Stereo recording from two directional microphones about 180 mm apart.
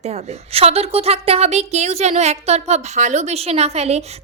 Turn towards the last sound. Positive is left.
turn(degrees=-35)  # may be behind; listen again after turning